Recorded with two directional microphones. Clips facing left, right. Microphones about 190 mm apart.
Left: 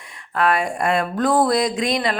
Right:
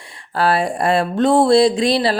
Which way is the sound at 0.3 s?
30° right (ahead or behind).